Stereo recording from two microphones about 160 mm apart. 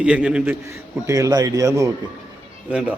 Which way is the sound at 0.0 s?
5° right (ahead or behind).